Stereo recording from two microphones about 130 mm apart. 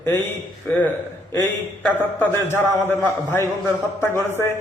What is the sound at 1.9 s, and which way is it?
A man's voice, 15° left (ahead or behind).